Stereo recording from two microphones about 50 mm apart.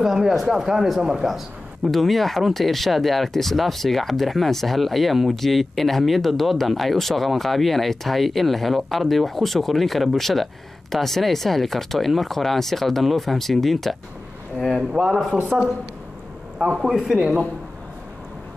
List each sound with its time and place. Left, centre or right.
0.0 s speech: centre
14.8 s speech: centre
16.5 s a man's voice: centre